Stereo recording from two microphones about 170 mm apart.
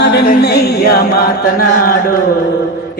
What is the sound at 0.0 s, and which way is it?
Music, 75° left (ahead or behind).